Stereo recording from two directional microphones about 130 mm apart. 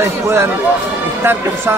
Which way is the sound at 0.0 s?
20° right (ahead or behind).